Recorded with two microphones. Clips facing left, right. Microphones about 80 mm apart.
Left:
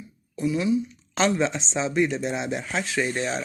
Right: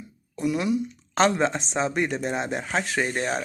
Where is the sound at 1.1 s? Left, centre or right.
Right.